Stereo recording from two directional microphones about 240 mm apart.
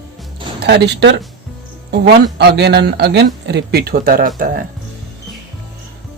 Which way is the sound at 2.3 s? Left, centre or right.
Right.